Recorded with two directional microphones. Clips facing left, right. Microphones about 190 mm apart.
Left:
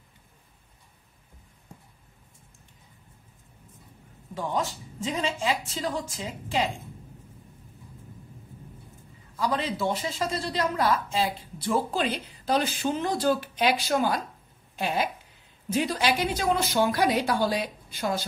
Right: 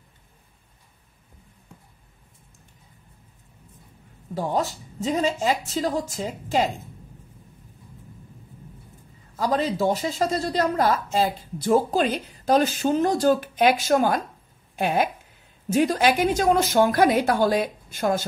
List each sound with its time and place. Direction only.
4.3 s a woman's voice: 40° right (ahead or behind)
9.4 s a woman's voice: 40° right (ahead or behind)